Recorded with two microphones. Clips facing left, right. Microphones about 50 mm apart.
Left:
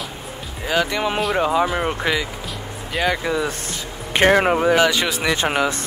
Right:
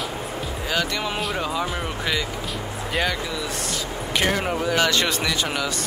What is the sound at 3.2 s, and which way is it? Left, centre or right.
Speech, left.